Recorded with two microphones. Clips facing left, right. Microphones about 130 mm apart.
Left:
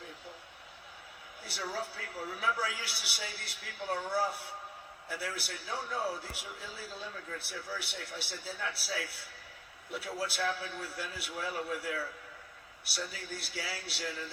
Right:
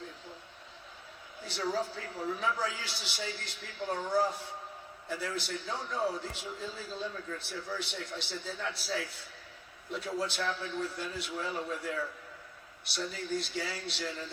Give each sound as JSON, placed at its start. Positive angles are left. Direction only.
{"t": 2.0, "sound": "a man's voice", "side_deg": 10}
{"t": 12.9, "sound": "a man's voice", "side_deg": 5}